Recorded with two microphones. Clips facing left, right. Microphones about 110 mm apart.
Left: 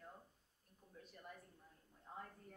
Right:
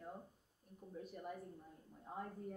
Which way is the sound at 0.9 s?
15° right (ahead or behind).